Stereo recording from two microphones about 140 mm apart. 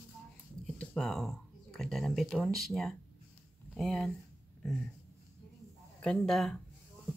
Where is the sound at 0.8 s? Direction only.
5° left (ahead or behind).